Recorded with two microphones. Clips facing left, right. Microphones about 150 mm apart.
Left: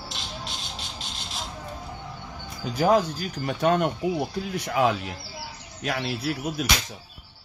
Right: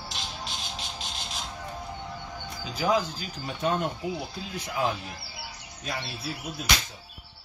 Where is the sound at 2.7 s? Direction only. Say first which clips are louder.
Left 5 dB; 55° left (ahead or behind); by 6.6 s 75° left (ahead or behind).